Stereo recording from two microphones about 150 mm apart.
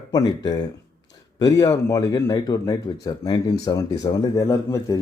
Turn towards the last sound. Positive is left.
turn(degrees=20)  # may be behind; listen again after turning